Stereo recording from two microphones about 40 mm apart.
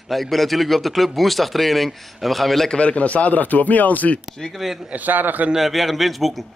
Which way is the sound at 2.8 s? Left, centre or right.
Left.